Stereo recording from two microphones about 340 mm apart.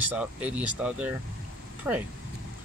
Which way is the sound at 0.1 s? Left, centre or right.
Centre.